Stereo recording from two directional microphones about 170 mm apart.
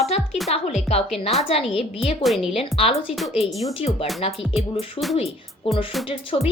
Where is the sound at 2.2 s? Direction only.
Centre (ahead or behind).